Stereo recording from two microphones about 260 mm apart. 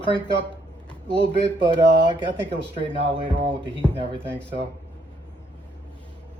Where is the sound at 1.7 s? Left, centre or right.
Centre.